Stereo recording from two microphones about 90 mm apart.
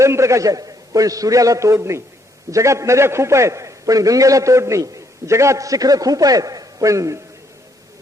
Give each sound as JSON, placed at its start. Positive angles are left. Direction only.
{"t": 0.0, "sound": "a man's voice", "side_deg": -30}